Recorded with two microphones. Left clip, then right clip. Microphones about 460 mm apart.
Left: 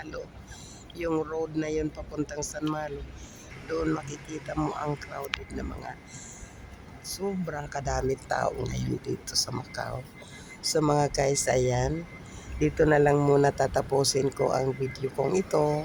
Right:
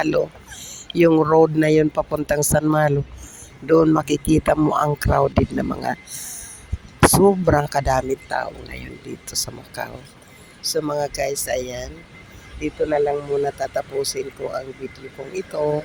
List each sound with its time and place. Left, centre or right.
0.0 s speech: left